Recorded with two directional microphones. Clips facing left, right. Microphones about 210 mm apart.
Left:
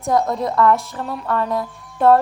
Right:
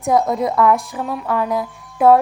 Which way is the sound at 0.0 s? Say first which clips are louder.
Right 2 dB; centre (ahead or behind).